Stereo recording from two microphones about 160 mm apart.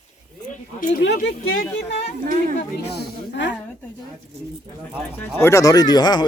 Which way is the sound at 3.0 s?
90° left.